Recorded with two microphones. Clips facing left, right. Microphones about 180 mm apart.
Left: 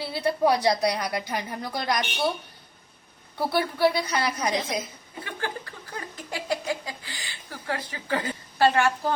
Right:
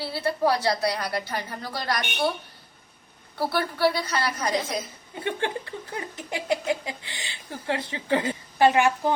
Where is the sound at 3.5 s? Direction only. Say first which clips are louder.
Left 2 dB; 15° left (ahead or behind).